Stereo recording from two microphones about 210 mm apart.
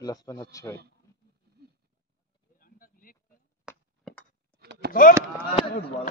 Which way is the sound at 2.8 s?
40° left (ahead or behind).